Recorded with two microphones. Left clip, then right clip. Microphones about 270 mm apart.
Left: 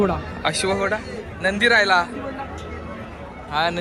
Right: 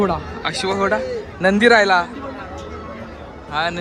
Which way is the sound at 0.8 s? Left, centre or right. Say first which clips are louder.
Right 5 dB; centre.